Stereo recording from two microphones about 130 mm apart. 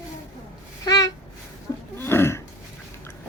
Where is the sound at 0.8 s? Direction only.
30° left (ahead or behind).